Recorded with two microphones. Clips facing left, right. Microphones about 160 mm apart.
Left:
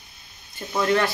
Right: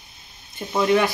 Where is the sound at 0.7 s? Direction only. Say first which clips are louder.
Right 3 dB; 15° right (ahead or behind).